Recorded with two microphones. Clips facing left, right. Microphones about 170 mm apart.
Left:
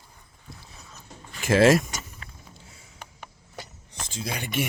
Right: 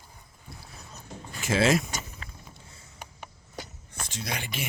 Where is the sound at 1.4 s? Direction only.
55° left (ahead or behind).